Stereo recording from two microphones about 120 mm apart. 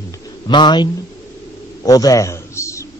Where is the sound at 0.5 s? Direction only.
40° left (ahead or behind).